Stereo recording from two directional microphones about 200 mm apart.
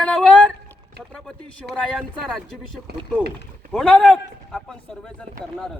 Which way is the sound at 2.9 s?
50° right (ahead or behind).